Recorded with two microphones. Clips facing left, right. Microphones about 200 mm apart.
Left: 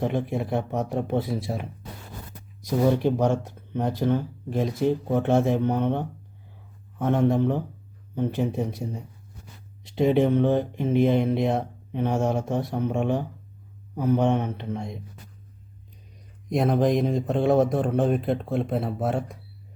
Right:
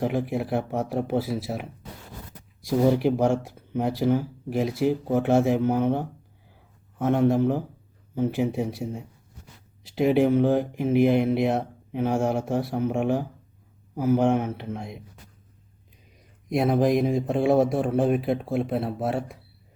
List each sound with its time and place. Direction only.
0.0 s speech: 5° right (ahead or behind)
16.5 s speech: 5° right (ahead or behind)